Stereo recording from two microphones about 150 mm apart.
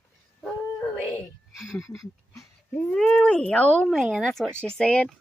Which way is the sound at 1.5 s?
Centre (ahead or behind).